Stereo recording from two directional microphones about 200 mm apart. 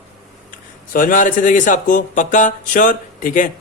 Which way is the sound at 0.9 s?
40° left (ahead or behind).